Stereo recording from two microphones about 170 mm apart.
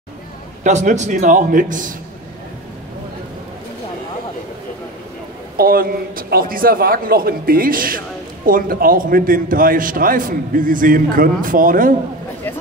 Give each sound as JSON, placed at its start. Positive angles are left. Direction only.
{"t": 0.7, "sound": "a man's voice", "side_deg": -45}
{"t": 5.6, "sound": "a man's voice", "side_deg": -60}